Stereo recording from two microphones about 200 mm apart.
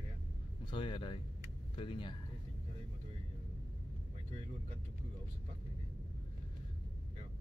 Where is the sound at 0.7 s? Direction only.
25° left (ahead or behind).